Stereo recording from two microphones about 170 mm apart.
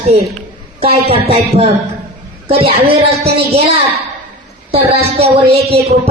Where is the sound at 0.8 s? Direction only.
35° right (ahead or behind).